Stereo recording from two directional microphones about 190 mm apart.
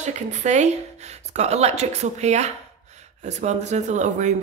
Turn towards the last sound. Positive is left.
turn(degrees=-40)  # may be behind; listen again after turning